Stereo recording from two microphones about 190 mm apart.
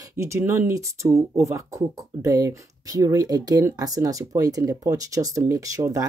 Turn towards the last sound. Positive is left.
turn(degrees=-15)  # may be behind; listen again after turning